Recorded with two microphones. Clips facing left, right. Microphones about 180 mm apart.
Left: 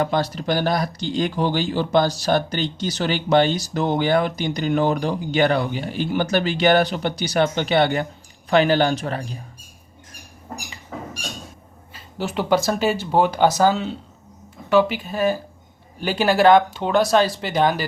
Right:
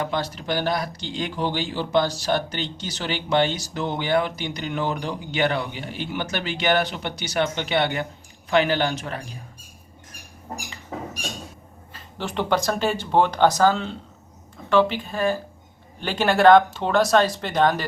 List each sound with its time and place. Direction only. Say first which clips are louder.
0.0 s speech: left 5 dB; 40° left (ahead or behind)
12.1 s speech: left 3 dB; 5° left (ahead or behind)